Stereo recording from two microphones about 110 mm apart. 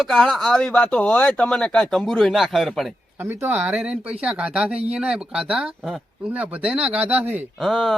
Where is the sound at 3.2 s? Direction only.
20° right (ahead or behind).